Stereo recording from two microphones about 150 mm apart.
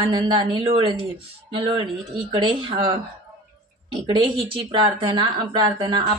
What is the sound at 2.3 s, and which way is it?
Speech, 35° right (ahead or behind).